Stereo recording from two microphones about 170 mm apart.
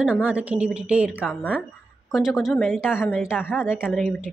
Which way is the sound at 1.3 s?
10° left (ahead or behind).